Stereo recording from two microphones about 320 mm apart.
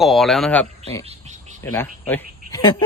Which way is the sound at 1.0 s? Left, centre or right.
Right.